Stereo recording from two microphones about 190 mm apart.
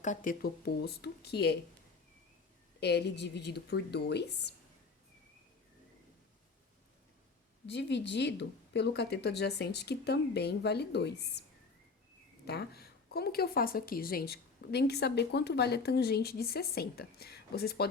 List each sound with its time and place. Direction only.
0.0 s a woman's voice: 40° left (ahead or behind); by 1.5 s 60° left (ahead or behind)
2.8 s a woman's voice: 60° left (ahead or behind)
7.7 s a woman's voice: 65° left (ahead or behind)
12.5 s a woman's voice: 55° left (ahead or behind)